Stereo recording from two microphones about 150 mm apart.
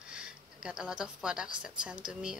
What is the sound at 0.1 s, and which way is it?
A woman's voice, 5° right (ahead or behind).